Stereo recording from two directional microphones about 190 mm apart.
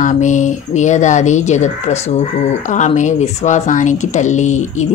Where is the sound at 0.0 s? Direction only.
40° left (ahead or behind).